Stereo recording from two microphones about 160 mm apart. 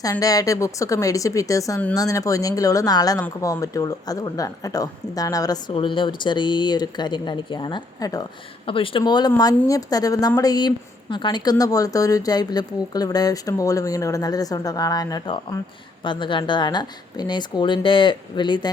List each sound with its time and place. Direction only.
0.0 s a woman's voice: 20° left (ahead or behind)
8.6 s a woman's voice: 35° left (ahead or behind)